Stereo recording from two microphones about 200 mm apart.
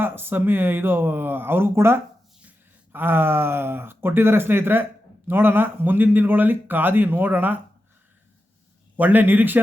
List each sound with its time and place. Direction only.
0.0 s speech: 10° right (ahead or behind)
9.0 s speech: 10° right (ahead or behind)